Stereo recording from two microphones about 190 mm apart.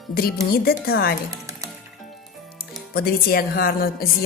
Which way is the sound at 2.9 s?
55° left (ahead or behind).